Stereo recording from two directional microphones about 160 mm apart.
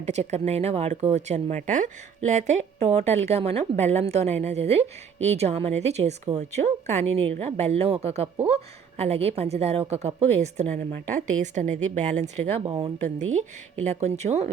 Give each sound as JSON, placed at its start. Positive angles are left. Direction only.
{"t": 0.0, "sound": "a woman's voice", "side_deg": -45}
{"t": 12.6, "sound": "speech", "side_deg": -30}
{"t": 13.1, "sound": "a woman's voice", "side_deg": -45}